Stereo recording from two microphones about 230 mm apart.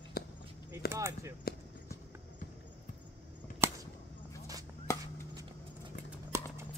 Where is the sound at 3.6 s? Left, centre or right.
Centre.